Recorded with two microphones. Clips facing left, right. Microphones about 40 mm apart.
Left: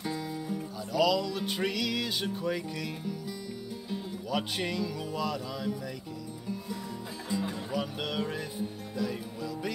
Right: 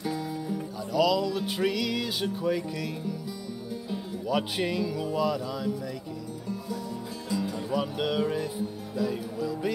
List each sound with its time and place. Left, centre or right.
0.0 s music: centre
3.9 s speech: centre
7.2 s music: centre
7.5 s music: centre